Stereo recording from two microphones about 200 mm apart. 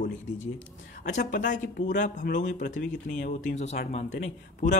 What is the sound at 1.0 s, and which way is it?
Speech, 40° left (ahead or behind).